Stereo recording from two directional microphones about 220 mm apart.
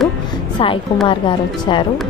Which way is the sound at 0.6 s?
25° left (ahead or behind).